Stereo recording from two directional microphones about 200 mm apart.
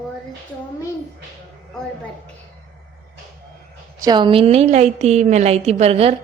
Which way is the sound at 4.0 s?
20° right (ahead or behind).